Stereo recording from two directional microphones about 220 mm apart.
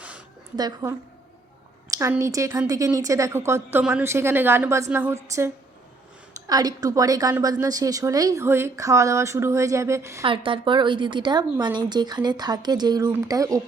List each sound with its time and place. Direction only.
0.5 s a woman's voice: 15° right (ahead or behind)
6.5 s a woman's voice: 15° right (ahead or behind)
10.2 s a woman's voice: 25° right (ahead or behind)